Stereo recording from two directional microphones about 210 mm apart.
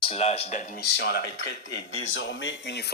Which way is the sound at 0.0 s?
30° left (ahead or behind).